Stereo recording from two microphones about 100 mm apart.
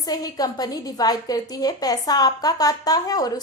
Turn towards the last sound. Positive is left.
turn(degrees=40)  # may be behind; listen again after turning